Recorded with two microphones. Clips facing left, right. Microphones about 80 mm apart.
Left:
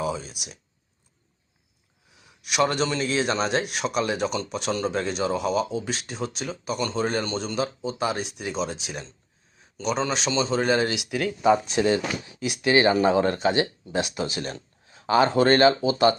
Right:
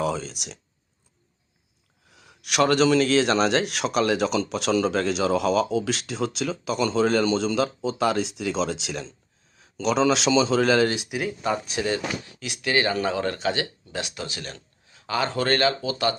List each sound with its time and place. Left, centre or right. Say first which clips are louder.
0.0 s speech: right 2 dB; right
2.0 s speech: even; right
10.1 s speech: right 5 dB; right
11.7 s speech: left 4 dB; left